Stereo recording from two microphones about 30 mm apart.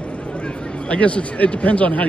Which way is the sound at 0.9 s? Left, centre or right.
Left.